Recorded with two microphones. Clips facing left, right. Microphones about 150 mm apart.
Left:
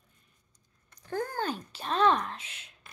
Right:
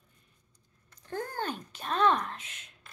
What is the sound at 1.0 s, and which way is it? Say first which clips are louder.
A woman's voice: left 3 dB; 40° left (ahead or behind).